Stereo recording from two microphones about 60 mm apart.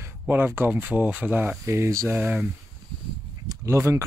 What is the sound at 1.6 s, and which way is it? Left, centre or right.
Speech, right.